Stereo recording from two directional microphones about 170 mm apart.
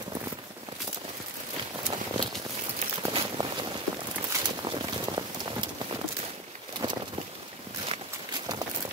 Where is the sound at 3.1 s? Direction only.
30° right (ahead or behind).